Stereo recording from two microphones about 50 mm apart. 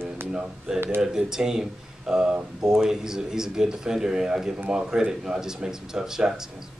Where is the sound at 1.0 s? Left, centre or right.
Centre.